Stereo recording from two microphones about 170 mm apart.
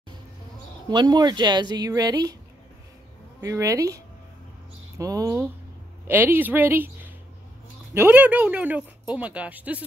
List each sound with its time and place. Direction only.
0.8 s speech: 25° right (ahead or behind)
3.3 s speech: 15° right (ahead or behind)